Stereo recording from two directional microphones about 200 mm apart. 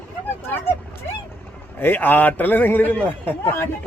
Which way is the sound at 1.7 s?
10° left (ahead or behind).